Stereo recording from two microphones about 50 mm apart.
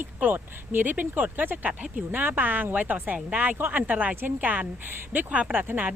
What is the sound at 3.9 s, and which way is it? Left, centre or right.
Speech, right.